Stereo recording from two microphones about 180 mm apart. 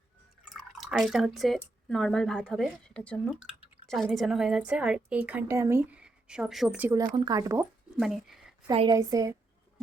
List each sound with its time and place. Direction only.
0.8 s a woman's voice: 5° right (ahead or behind)
7.0 s speech: 20° right (ahead or behind)
7.9 s speech: centre (ahead or behind)
8.9 s speech: 20° right (ahead or behind)